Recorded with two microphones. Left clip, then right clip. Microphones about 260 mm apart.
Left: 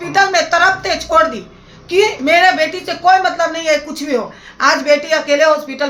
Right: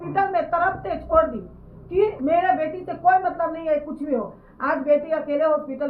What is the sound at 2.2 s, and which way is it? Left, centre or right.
A woman's voice, left.